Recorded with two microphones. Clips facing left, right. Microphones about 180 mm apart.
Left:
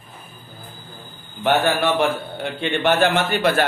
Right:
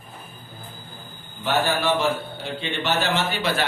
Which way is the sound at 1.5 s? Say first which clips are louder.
Left 4 dB; 60° left (ahead or behind).